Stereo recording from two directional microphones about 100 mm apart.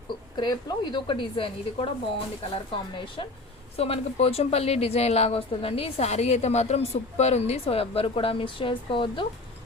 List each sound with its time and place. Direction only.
0.1 s a woman's voice: 50° left (ahead or behind)
3.8 s speech: 90° left; by 9.2 s 55° left (ahead or behind)